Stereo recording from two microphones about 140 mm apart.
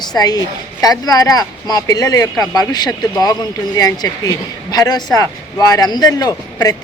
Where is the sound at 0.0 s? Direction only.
30° left (ahead or behind).